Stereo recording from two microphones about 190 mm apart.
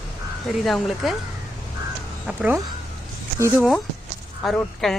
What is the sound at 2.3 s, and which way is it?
Speech, 10° right (ahead or behind).